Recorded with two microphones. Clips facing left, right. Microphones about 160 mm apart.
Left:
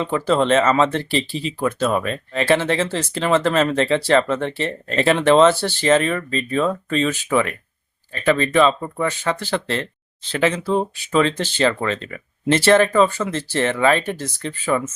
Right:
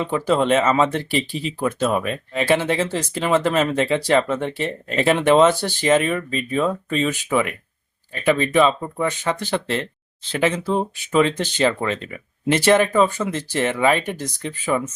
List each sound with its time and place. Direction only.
0.0 s speech: 10° right (ahead or behind)